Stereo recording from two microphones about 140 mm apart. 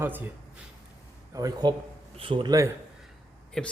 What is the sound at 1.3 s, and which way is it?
A man's voice, 30° right (ahead or behind).